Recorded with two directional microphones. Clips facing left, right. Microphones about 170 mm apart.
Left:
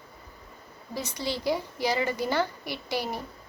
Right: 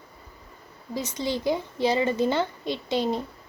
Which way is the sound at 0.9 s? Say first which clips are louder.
Right 4 dB; 20° right (ahead or behind).